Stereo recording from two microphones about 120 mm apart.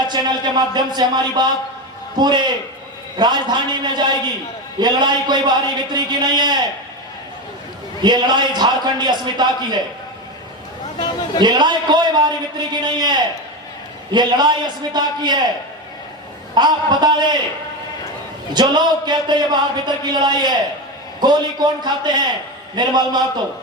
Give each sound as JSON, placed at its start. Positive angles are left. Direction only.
{"t": 0.1, "sound": "speech", "side_deg": -35}
{"t": 8.0, "sound": "speech", "side_deg": -35}
{"t": 10.9, "sound": "a sound", "side_deg": 40}
{"t": 11.4, "sound": "speech", "side_deg": -35}
{"t": 16.6, "sound": "speech", "side_deg": -40}
{"t": 18.5, "sound": "speech", "side_deg": -35}